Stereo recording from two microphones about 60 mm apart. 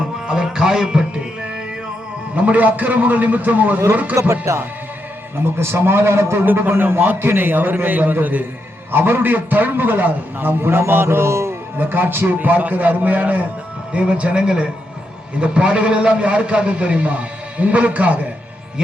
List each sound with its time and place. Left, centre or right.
0.3 s music: centre
2.3 s a man's voice: right
4.2 s speech: right
5.5 s a man's voice: right
6.4 s a man's voice: right
11.8 s a man's voice: right
13.9 s a man's voice: centre